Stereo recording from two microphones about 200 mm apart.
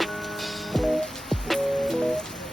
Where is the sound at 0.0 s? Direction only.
Centre (ahead or behind).